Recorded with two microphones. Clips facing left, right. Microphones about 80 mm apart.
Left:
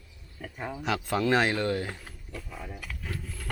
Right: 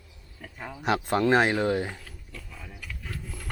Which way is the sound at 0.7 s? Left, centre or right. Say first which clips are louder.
Right 4 dB; centre.